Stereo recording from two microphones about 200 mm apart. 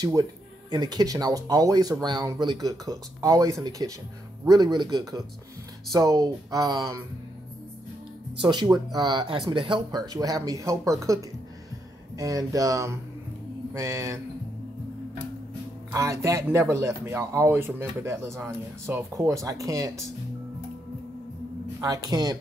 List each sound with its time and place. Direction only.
0.0 s speech: 20° right (ahead or behind)
8.4 s speech: 20° right (ahead or behind)
15.9 s speech: 15° right (ahead or behind)
21.8 s speech: 20° right (ahead or behind)